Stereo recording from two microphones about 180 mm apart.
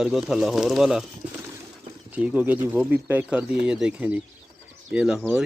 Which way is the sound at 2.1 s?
10° right (ahead or behind).